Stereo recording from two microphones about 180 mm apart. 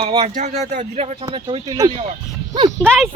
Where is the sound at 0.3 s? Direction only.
40° right (ahead or behind); by 1.9 s 20° right (ahead or behind).